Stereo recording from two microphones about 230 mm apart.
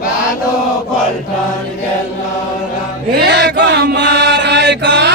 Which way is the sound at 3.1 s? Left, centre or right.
Right.